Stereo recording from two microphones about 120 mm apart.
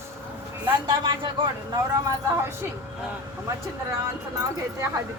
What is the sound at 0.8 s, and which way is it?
Speech, 40° right (ahead or behind).